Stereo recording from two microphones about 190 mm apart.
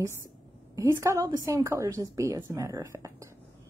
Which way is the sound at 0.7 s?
15° right (ahead or behind).